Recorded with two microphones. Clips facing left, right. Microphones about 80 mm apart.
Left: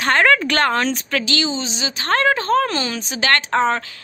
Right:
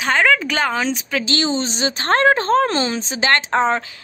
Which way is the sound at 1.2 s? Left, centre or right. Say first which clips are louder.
Right 2 dB; right.